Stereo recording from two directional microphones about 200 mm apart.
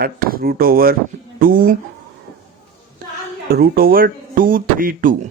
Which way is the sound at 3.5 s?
50° right (ahead or behind).